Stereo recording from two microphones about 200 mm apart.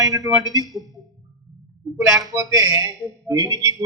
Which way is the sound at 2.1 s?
15° right (ahead or behind).